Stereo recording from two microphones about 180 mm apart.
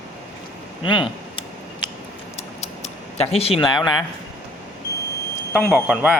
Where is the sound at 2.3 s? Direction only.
35° left (ahead or behind).